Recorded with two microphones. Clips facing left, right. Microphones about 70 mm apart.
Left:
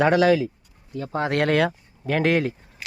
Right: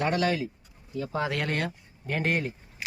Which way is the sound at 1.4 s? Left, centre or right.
Left.